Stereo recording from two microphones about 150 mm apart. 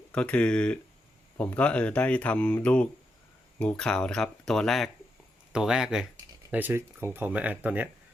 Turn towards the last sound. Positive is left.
turn(degrees=-10)  # may be behind; listen again after turning